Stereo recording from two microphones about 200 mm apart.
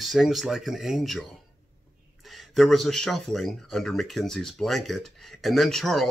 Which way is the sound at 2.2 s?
Centre (ahead or behind).